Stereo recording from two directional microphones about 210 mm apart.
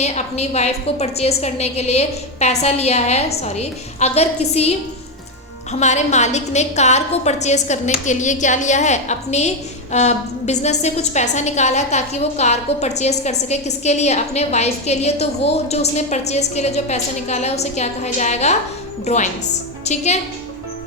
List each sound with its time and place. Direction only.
0.0 s a woman's voice: 30° left (ahead or behind)
5.8 s a woman's voice: 35° left (ahead or behind)